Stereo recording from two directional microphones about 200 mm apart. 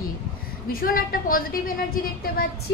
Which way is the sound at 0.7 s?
45° left (ahead or behind).